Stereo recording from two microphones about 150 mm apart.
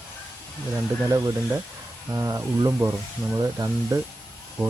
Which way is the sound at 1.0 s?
20° right (ahead or behind).